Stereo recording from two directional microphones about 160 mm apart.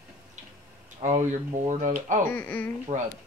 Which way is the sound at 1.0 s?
45° right (ahead or behind).